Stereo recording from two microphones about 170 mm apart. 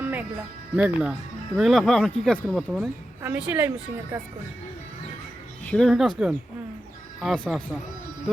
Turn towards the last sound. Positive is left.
turn(degrees=5)  # may be behind; listen again after turning